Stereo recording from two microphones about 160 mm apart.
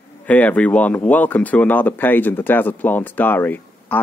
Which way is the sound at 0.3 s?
10° left (ahead or behind).